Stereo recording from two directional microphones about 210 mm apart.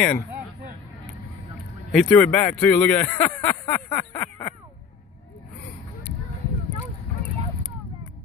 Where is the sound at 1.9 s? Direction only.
Centre (ahead or behind).